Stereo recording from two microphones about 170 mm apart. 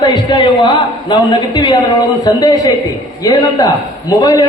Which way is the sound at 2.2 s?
20° left (ahead or behind).